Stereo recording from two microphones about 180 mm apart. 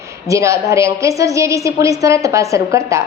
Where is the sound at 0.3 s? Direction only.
15° right (ahead or behind).